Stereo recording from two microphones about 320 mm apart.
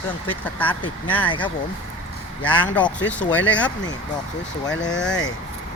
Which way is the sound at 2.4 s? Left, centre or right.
Centre.